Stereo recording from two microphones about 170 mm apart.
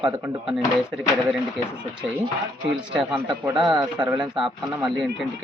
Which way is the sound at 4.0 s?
25° right (ahead or behind).